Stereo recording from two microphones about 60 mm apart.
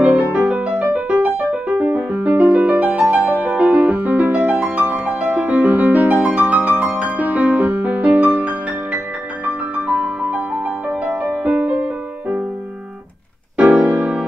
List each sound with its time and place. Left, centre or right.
0.0 s music: right
13.6 s music: right